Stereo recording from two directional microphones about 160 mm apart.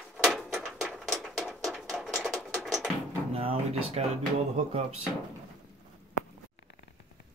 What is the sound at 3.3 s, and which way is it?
Drawer open or close, 40° right (ahead or behind).